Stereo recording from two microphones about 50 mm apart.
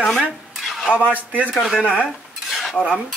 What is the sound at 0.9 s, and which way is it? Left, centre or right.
Speech, right.